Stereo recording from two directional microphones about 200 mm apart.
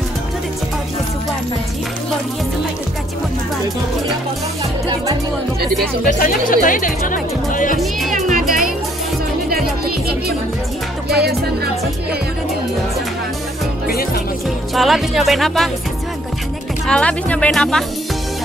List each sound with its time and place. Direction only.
6.1 s speech: 45° left (ahead or behind)
8.1 s music: 40° right (ahead or behind)
11.1 s music: 55° right (ahead or behind)
14.7 s speech: centre (ahead or behind)
16.8 s speech: 5° left (ahead or behind)